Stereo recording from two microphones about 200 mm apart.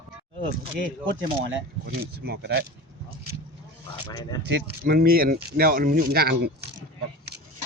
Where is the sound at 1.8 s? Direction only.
50° right (ahead or behind).